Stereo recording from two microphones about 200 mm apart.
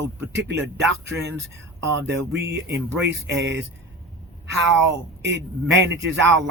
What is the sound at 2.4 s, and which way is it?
Speech, 55° right (ahead or behind).